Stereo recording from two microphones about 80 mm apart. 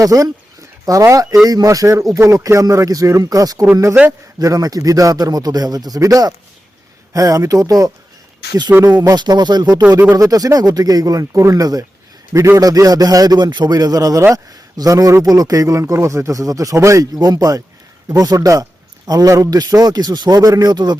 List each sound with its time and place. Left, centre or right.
0.0 s a man's voice: right
8.7 s speech: right
9.0 s speech: right
10.2 s a man's voice: right
17.2 s a man's voice: right
19.3 s a man's voice: right
19.5 s speech: right